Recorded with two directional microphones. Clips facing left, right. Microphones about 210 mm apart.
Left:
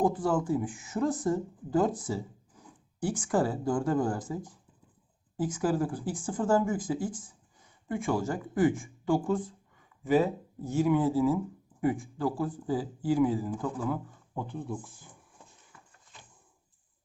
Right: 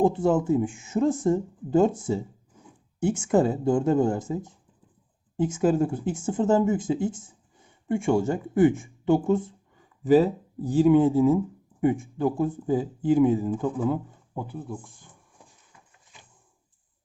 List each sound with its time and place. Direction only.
0.0 s speech: 25° right (ahead or behind)
10.0 s speech: 35° right (ahead or behind)
14.3 s speech: 5° right (ahead or behind)